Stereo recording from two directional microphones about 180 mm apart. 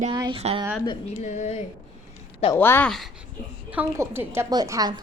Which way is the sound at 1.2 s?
40° left (ahead or behind).